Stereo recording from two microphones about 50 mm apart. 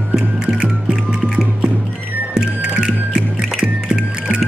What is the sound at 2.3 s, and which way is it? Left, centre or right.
Music, centre.